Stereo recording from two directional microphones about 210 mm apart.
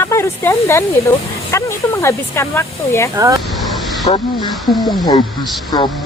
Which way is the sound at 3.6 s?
Centre (ahead or behind).